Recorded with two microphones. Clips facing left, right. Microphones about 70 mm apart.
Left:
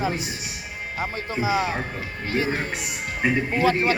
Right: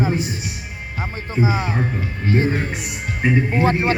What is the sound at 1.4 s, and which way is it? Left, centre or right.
Speech, centre.